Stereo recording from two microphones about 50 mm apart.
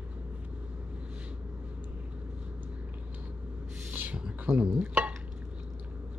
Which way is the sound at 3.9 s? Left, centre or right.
Right.